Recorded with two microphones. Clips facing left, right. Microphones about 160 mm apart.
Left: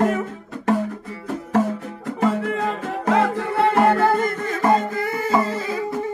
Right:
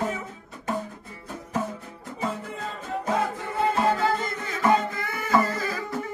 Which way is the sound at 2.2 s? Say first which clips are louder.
Left 10 dB; 85° left.